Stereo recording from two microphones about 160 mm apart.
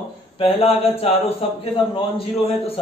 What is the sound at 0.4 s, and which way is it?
Speech, 40° left (ahead or behind).